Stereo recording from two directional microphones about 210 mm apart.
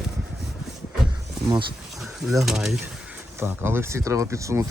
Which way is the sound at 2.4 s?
Centre (ahead or behind).